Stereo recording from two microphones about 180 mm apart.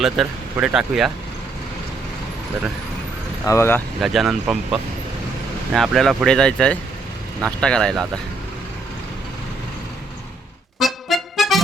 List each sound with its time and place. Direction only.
0.0 s speech: 5° right (ahead or behind)
3.4 s speech: 15° left (ahead or behind)
4.0 s speech: centre (ahead or behind)
10.8 s music: centre (ahead or behind)